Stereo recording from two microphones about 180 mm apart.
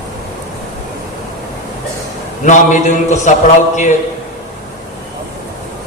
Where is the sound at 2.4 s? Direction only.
45° left (ahead or behind).